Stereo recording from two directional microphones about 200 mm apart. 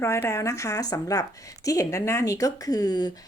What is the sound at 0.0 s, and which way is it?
Speech, 15° left (ahead or behind).